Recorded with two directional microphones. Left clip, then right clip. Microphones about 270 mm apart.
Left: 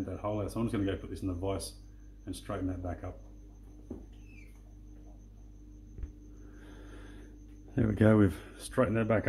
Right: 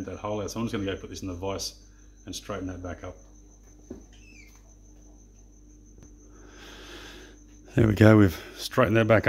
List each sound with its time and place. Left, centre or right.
0.2 s speech: right
6.6 s a sound: right
7.7 s speech: right